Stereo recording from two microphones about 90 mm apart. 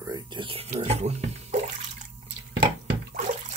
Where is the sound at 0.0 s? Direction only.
50° right (ahead or behind).